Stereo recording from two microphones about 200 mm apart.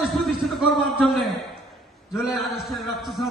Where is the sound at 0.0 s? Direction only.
Centre (ahead or behind).